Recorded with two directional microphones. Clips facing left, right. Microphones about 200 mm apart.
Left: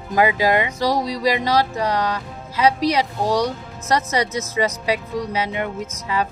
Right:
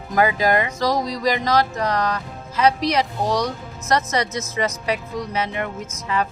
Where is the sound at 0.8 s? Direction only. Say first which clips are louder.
Left 1 dB; 10° left (ahead or behind).